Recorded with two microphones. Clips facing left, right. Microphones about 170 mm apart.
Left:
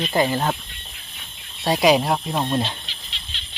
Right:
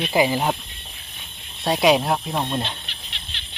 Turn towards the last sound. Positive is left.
turn(degrees=-60)  # may be behind; listen again after turning